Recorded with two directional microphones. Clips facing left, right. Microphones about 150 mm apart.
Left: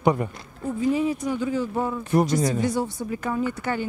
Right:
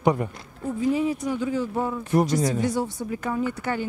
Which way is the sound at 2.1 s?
5° right (ahead or behind).